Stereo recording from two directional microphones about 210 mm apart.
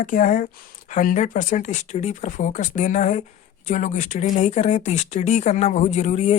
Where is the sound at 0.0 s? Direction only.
40° left (ahead or behind).